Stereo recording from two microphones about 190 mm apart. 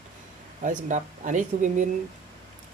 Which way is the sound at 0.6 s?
40° right (ahead or behind).